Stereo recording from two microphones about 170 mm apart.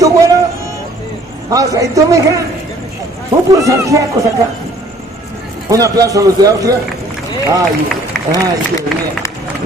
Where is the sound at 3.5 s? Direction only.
20° right (ahead or behind).